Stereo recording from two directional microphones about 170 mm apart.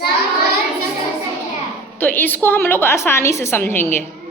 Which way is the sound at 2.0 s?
10° left (ahead or behind).